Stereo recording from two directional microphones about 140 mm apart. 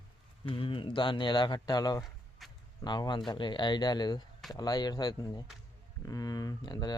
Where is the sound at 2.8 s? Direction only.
30° left (ahead or behind).